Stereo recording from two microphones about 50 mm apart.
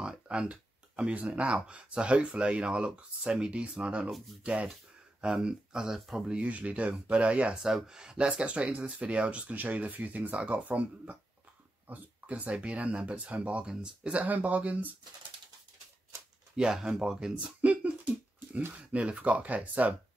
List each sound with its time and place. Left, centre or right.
0.0 s speech: centre
6.3 s speech: right
7.5 s speech: centre; by 14.9 s right
16.5 s speech: centre
17.6 s speech: right